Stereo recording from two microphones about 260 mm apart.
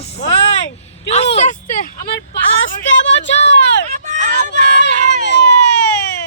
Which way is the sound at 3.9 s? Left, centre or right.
Right.